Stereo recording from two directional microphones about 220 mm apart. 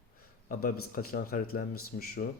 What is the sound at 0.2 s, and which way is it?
Speech, 40° left (ahead or behind).